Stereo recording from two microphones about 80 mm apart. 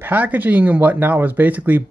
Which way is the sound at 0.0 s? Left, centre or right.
Right.